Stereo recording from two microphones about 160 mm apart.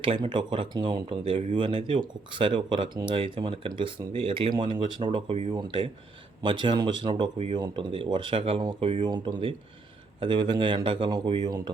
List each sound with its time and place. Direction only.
0.0 s speech: 30° right (ahead or behind)